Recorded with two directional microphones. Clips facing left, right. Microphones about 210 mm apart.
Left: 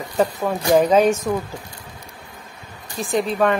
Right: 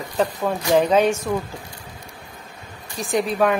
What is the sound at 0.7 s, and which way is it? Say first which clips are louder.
Speech: left 2 dB; 10° left (ahead or behind).